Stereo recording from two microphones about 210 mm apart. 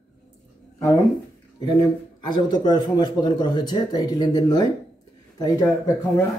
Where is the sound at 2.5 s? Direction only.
20° left (ahead or behind).